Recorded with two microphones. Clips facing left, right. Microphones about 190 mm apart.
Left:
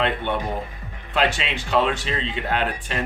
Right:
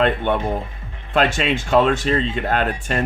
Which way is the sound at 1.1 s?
45° right (ahead or behind).